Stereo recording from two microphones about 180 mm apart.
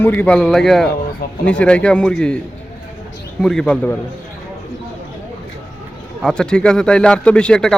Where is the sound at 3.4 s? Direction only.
5° left (ahead or behind).